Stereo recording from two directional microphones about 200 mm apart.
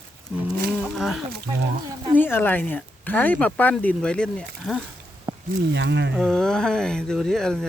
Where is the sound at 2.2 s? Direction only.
10° left (ahead or behind).